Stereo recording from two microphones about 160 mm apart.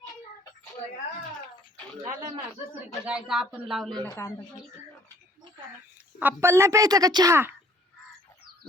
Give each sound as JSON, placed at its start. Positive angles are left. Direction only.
{"t": 2.8, "sound": "speech", "side_deg": -10}
{"t": 4.1, "sound": "speech", "side_deg": 20}
{"t": 6.1, "sound": "a woman's voice", "side_deg": -15}